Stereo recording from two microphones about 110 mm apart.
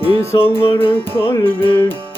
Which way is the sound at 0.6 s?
55° left (ahead or behind).